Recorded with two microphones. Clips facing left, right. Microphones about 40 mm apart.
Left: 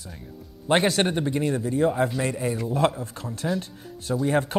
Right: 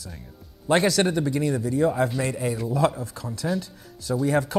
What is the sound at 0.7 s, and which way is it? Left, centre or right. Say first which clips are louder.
Speech: right 1 dB; left.